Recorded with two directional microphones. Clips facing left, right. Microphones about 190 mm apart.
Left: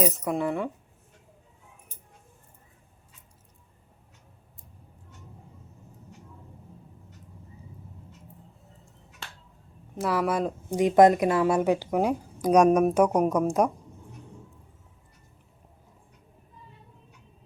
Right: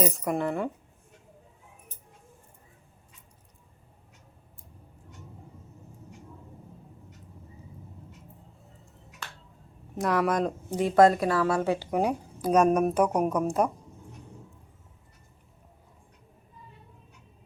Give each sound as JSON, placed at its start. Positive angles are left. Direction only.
{"t": 0.0, "sound": "speech", "side_deg": 0}
{"t": 10.0, "sound": "speech", "side_deg": 5}